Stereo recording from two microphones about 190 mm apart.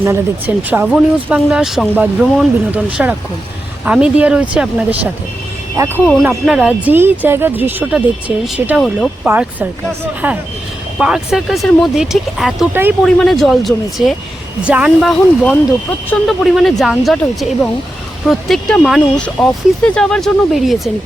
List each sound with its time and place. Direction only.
0.0 s speech: 10° right (ahead or behind)
6.2 s speech: 5° right (ahead or behind)